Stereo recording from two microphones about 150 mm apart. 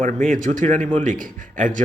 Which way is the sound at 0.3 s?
55° right (ahead or behind).